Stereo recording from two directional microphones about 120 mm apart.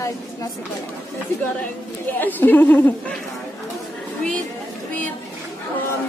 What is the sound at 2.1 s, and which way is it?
Speech, 15° left (ahead or behind).